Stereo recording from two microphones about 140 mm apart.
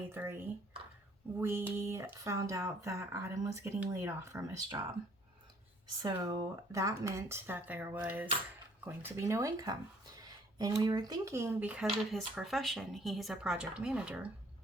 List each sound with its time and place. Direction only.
0.1 s speech: 15° right (ahead or behind)
1.4 s speech: 15° right (ahead or behind)
6.0 s speech: 25° right (ahead or behind); by 14.3 s 10° right (ahead or behind)